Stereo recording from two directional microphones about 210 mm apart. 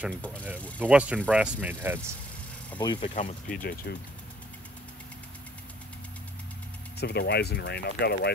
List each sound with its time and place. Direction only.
0.7 s speech: 5° right (ahead or behind)
2.8 s speech: 20° left (ahead or behind)
3.2 s speech: 35° left (ahead or behind)
7.0 s speech: 50° left (ahead or behind)